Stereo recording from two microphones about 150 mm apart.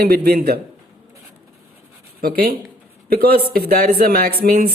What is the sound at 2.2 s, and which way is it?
A man's voice, 90° right.